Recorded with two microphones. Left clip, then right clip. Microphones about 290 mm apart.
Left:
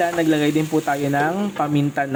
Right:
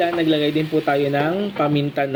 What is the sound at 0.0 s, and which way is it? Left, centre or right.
Speech, left.